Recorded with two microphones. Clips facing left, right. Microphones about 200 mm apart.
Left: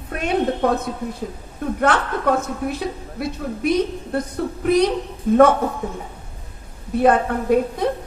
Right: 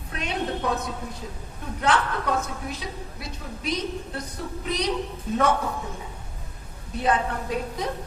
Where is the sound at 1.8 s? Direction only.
55° left (ahead or behind).